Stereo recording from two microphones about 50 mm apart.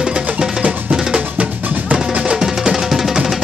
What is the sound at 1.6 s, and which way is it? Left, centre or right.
Drum, right.